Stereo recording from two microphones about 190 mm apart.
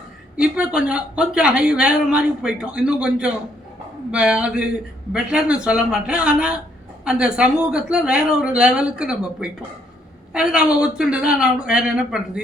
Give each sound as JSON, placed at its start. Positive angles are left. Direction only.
{"t": 0.3, "sound": "speech", "side_deg": -5}